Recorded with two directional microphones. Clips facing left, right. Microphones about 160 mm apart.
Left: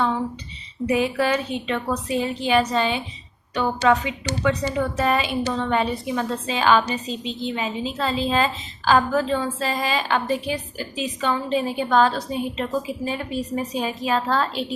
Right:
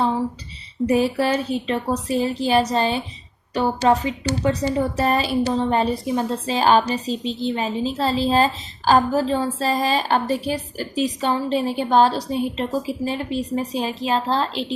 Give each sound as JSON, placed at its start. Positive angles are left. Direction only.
{"t": 0.9, "sound": "a woman's voice", "side_deg": -35}